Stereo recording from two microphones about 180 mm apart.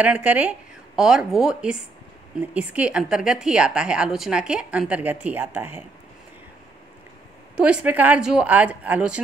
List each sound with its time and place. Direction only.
0.0 s a woman's voice: 10° right (ahead or behind)
7.5 s speech: 5° right (ahead or behind)